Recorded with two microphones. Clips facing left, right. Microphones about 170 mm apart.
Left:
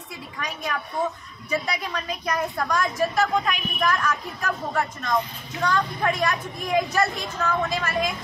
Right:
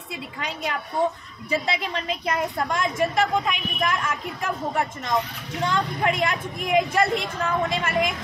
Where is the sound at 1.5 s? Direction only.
25° right (ahead or behind).